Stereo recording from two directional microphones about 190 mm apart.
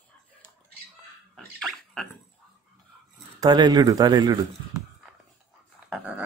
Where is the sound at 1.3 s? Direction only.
Centre (ahead or behind).